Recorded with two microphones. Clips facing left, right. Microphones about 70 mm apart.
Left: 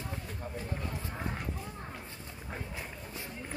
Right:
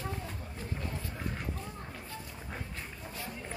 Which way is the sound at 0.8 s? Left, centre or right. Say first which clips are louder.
Even; centre.